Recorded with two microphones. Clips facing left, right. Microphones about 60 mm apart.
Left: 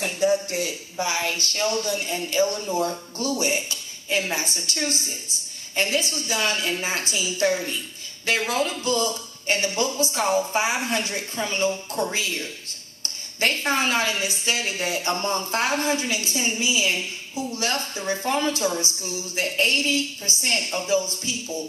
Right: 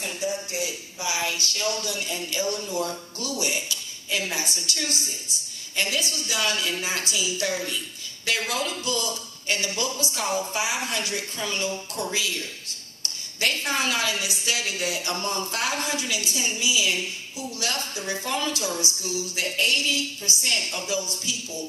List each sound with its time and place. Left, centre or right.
0.0 s a woman's voice: left
13.0 s a sound: left
13.7 s a woman's voice: left